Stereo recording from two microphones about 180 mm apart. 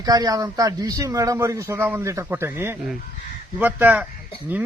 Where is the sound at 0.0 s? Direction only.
20° right (ahead or behind).